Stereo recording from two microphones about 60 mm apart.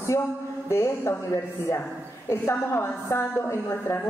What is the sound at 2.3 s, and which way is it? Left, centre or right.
A woman's voice, left.